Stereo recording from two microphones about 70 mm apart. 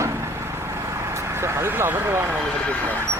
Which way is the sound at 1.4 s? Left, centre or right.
Right.